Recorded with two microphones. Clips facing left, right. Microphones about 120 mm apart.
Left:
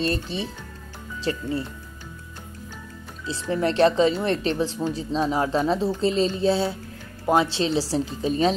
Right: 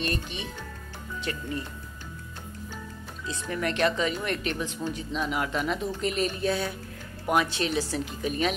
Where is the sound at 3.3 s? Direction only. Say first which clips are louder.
Left 6 dB; 30° left (ahead or behind).